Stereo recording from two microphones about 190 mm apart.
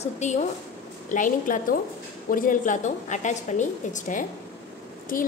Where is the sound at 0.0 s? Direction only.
35° left (ahead or behind).